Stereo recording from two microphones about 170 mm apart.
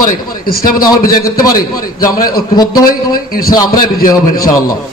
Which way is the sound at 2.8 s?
55° left (ahead or behind).